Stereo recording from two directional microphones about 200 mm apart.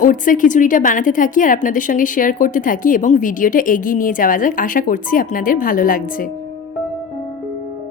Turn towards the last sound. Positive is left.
turn(degrees=45)  # may be behind; listen again after turning